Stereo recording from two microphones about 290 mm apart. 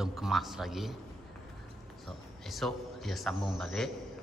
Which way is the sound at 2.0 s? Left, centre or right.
Centre.